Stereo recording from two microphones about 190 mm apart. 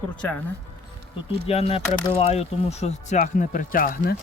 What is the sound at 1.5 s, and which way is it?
Speech, 30° left (ahead or behind).